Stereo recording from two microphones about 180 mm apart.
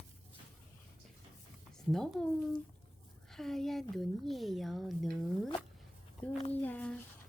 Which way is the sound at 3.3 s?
Centre (ahead or behind).